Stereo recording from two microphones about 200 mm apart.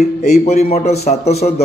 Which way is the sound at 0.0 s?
35° left (ahead or behind).